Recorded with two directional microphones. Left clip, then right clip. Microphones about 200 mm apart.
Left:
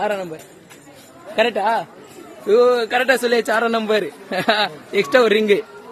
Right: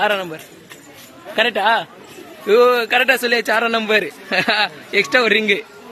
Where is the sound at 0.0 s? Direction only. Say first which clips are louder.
Right 4 dB; centre (ahead or behind).